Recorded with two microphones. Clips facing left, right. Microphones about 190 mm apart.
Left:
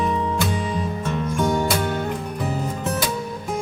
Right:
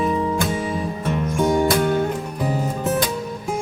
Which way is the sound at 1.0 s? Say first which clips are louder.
Right 3 dB; 15° right (ahead or behind).